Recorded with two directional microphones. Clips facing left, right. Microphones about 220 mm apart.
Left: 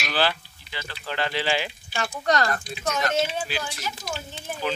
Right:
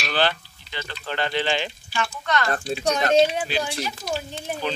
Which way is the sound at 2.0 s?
35° left (ahead or behind).